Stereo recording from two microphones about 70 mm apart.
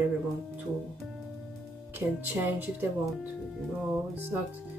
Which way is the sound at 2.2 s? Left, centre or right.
Right.